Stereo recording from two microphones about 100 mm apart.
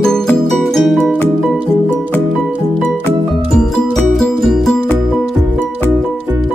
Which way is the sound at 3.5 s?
5° left (ahead or behind).